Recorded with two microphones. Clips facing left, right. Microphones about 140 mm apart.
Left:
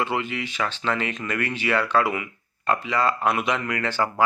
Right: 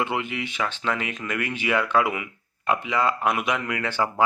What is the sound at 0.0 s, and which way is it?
Speech, 15° right (ahead or behind).